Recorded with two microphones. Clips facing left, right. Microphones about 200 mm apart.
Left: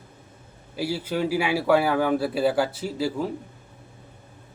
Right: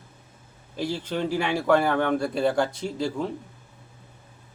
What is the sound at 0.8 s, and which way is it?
Speech, 10° left (ahead or behind).